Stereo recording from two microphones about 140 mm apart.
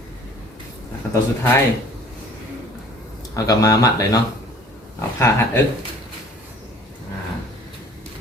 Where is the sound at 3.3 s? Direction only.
25° left (ahead or behind).